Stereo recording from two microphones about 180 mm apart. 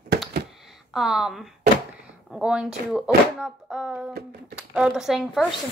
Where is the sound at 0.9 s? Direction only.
Centre (ahead or behind).